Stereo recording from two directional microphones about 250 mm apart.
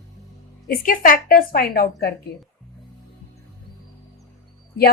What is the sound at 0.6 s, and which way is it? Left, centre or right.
A woman's voice, left.